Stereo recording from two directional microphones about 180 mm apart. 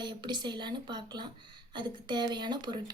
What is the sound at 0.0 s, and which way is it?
Speech, 25° right (ahead or behind).